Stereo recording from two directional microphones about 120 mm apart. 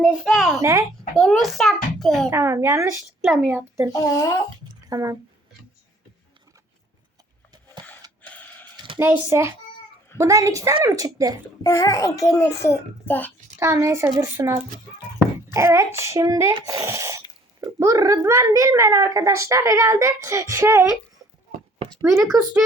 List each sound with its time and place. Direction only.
0.2 s a child's voice: centre (ahead or behind)
0.6 s a child's voice: 25° right (ahead or behind)
1.1 s a child's voice: centre (ahead or behind)
2.3 s a child's voice: 20° right (ahead or behind)
3.9 s a child's voice: 25° left (ahead or behind)
4.9 s speech: 30° right (ahead or behind)
8.3 s a sound: 15° left (ahead or behind)
9.0 s a child's voice: 20° right (ahead or behind)
11.6 s a child's voice: 25° left (ahead or behind)
13.6 s a child's voice: 25° right (ahead or behind)